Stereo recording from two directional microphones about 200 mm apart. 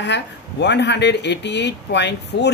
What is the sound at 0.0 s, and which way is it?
Speech, 60° left (ahead or behind).